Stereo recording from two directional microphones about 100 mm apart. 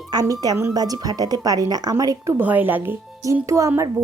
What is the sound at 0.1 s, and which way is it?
A woman's voice, 40° right (ahead or behind).